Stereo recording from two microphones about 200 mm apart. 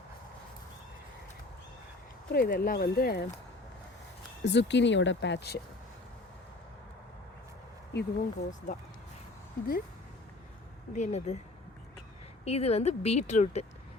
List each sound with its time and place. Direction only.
2.3 s speech: 50° left (ahead or behind)
4.4 s speech: 60° left (ahead or behind)
7.9 s speech: 40° left (ahead or behind)
10.9 s speech: 35° left (ahead or behind)
12.5 s speech: 30° left (ahead or behind)